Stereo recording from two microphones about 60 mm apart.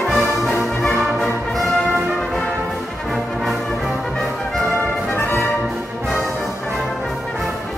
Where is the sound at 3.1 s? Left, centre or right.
Centre.